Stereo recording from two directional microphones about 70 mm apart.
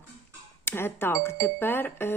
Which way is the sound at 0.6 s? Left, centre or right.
Left.